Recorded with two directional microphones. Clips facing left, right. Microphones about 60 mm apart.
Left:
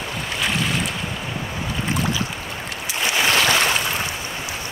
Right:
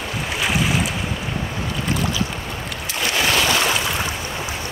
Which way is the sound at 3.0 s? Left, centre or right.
Left.